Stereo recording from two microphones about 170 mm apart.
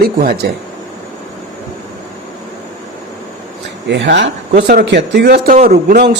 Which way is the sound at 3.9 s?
90° right.